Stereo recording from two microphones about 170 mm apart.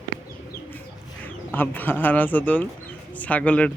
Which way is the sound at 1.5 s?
10° left (ahead or behind).